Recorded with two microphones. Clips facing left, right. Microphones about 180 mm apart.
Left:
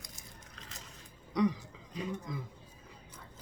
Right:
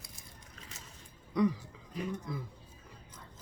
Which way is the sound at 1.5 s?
20° left (ahead or behind).